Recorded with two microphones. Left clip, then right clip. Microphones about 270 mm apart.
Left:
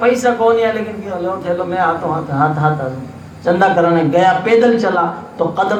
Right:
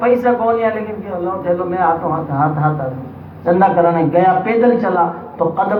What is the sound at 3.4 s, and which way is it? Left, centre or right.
A man's voice, left.